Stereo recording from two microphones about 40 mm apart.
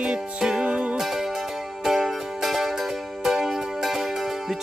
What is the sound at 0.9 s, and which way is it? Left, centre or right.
Music, centre.